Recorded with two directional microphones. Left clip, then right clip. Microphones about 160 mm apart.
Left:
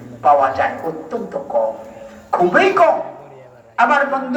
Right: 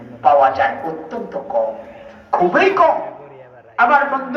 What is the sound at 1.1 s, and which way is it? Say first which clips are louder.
Music: left 1 dB; 75° left (ahead or behind).